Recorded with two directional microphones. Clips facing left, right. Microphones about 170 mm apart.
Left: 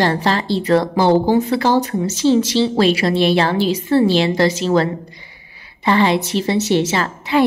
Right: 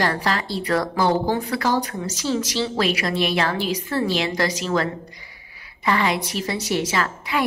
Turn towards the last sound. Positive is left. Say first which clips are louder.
# left 7 dB
turn(degrees=30)  # may be behind; listen again after turning